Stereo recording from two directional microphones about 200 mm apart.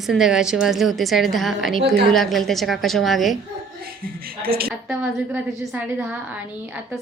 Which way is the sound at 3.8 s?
50° right (ahead or behind).